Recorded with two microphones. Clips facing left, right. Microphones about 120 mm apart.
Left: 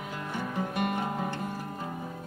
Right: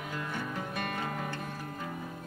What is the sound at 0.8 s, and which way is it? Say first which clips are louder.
Music: left 6 dB; 20° left (ahead or behind).